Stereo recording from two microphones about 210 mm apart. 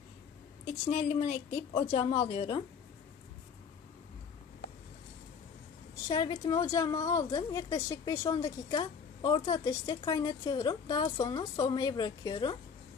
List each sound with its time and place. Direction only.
0.8 s a woman's voice: 35° left (ahead or behind)
6.0 s a woman's voice: 20° left (ahead or behind)